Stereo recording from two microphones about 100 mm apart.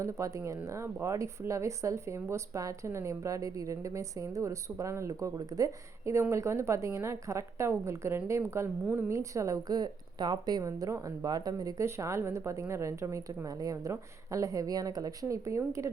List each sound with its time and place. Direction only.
0.0 s a woman's voice: 30° right (ahead or behind)
8.8 s a woman's voice: 15° right (ahead or behind)
9.0 s a woman's voice: 30° right (ahead or behind)
10.6 s speech: 30° right (ahead or behind)